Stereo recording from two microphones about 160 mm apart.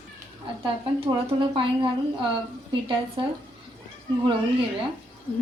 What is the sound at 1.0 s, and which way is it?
Speech, 30° right (ahead or behind).